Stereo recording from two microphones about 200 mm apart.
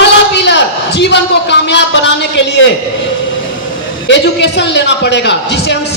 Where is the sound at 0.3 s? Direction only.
60° left (ahead or behind).